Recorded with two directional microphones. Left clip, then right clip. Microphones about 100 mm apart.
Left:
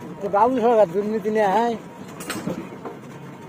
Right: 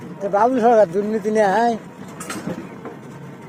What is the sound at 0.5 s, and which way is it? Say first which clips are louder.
Speech: right 3 dB; 35° right (ahead or behind).